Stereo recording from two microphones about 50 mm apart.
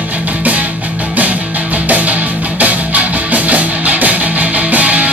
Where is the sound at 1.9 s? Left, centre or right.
Right.